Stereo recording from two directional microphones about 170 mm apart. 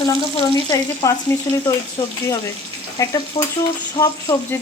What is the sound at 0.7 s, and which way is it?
Frying, 20° left (ahead or behind).